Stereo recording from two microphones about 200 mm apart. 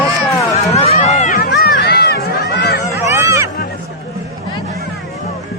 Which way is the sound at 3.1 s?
15° right (ahead or behind).